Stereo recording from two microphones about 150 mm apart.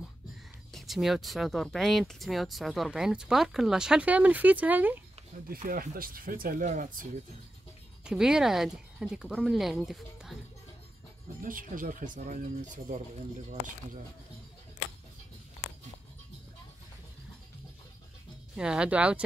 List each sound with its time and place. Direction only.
0.7 s speech: centre (ahead or behind)
5.5 s speech: 70° right (ahead or behind)
8.0 s speech: 5° right (ahead or behind)
11.4 s speech: 65° right (ahead or behind)
18.6 s speech: 5° right (ahead or behind)